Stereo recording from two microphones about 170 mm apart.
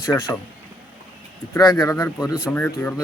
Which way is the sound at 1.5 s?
20° left (ahead or behind).